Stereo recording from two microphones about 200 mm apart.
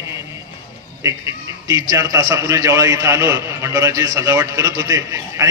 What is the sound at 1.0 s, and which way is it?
A man's voice, 15° right (ahead or behind).